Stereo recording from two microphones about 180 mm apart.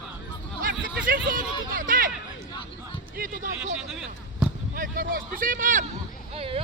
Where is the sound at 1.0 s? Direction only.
50° right (ahead or behind).